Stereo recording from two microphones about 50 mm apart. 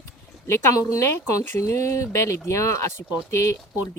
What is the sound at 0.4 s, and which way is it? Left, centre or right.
Speech, left.